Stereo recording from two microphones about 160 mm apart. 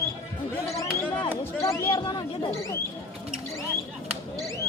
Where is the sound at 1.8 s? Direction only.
30° left (ahead or behind).